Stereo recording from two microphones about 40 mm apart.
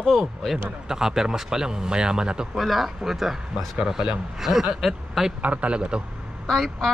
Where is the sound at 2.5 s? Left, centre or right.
Centre.